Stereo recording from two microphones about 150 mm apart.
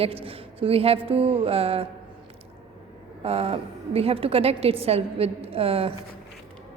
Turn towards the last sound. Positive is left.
turn(degrees=-40)  # may be behind; listen again after turning